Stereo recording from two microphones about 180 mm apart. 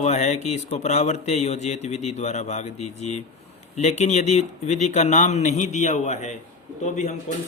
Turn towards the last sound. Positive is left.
turn(degrees=40)  # may be behind; listen again after turning